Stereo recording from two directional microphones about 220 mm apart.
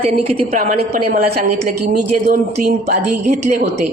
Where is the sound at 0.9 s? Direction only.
40° right (ahead or behind).